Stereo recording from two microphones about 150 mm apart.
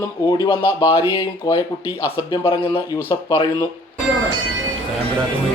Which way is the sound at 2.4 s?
35° left (ahead or behind).